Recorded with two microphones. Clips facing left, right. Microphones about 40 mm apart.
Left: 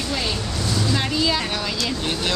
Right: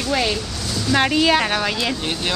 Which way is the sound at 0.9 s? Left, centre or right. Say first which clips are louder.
Right 9 dB; right.